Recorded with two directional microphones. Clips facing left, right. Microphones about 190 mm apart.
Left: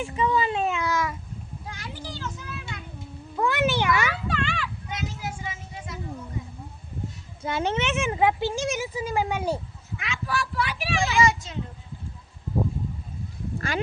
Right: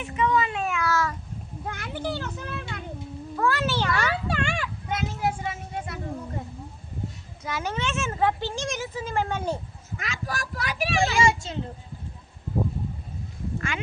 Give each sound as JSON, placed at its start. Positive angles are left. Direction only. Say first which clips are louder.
{"t": 0.0, "sound": "a sound", "louder": "even", "side_deg": 30}
{"t": 1.6, "sound": "a child's voice", "louder": "right 9 dB", "side_deg": -55}
{"t": 3.3, "sound": "speech", "louder": "left 2 dB", "side_deg": 20}
{"t": 4.4, "sound": "a sound", "louder": "right 1 dB", "side_deg": -50}
{"t": 7.4, "sound": "speech", "louder": "left 4 dB", "side_deg": 25}
{"t": 10.0, "sound": "speech", "louder": "left 3 dB", "side_deg": -40}
{"t": 11.2, "sound": "a child's voice", "louder": "even", "side_deg": -30}
{"t": 13.6, "sound": "speech", "louder": "left 5 dB", "side_deg": 35}